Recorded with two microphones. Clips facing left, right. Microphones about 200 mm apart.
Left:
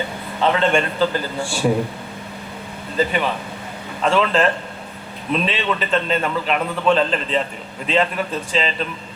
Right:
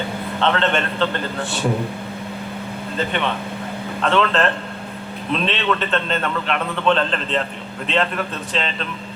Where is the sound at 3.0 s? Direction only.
5° left (ahead or behind).